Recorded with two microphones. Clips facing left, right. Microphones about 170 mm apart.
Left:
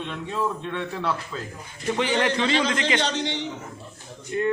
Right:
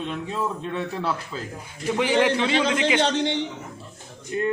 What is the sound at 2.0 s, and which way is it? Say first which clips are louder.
A man's voice: right 3 dB; 10° right (ahead or behind).